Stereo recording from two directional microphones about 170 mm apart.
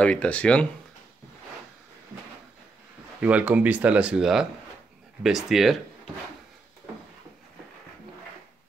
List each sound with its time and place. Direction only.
0.0 s speech: 5° left (ahead or behind)
3.2 s speech: 10° right (ahead or behind)